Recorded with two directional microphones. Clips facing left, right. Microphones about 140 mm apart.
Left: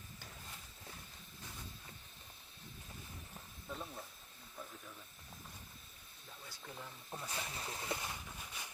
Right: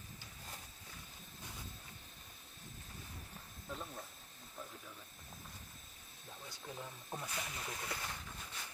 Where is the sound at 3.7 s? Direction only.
Centre (ahead or behind).